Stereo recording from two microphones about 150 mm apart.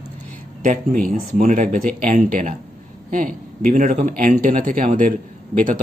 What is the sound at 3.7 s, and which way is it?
Speech, 60° right (ahead or behind).